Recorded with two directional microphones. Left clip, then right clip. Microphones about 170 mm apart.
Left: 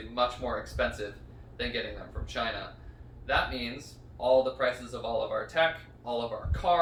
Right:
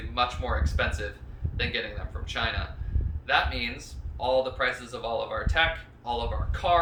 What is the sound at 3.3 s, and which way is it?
Speech, 10° right (ahead or behind).